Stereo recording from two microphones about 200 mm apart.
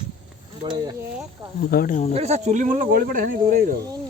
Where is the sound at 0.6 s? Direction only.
20° right (ahead or behind).